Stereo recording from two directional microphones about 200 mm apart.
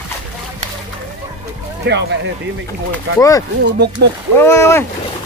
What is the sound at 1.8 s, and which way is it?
Speech, 60° right (ahead or behind).